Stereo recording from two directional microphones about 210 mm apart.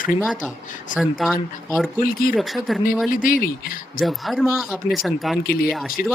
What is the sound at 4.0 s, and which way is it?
Speech, centre (ahead or behind).